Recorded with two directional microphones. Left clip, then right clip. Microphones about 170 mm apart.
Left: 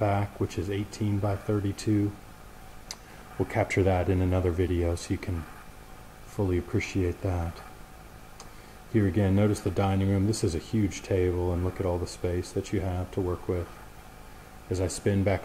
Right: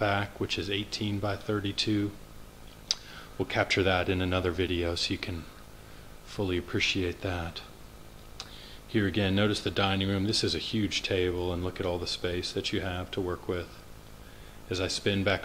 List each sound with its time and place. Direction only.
0.0 s speech: 5° right (ahead or behind)
3.4 s speech: 5° left (ahead or behind)
6.4 s speech: 5° right (ahead or behind)
8.9 s speech: 5° right (ahead or behind)
13.2 s speech: 20° right (ahead or behind)
14.7 s speech: 5° left (ahead or behind)